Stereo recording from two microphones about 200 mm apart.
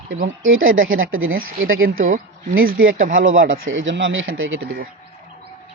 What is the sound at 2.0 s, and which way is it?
Speech, 45° right (ahead or behind).